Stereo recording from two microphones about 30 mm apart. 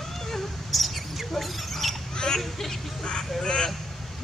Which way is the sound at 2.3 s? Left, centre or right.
Centre.